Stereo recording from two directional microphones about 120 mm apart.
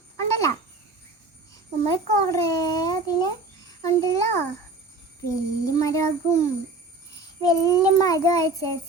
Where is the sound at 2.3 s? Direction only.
30° left (ahead or behind).